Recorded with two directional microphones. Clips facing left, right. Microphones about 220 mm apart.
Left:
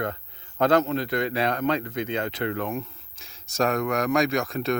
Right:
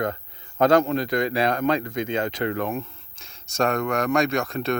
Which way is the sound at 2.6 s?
35° right (ahead or behind).